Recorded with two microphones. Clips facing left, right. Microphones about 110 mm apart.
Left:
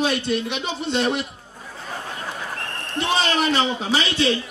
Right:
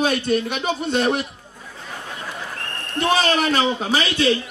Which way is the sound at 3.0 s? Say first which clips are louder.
Right 3 dB; 45° right (ahead or behind).